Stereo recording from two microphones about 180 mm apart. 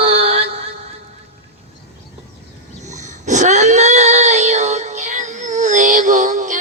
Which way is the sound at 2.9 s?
40° right (ahead or behind).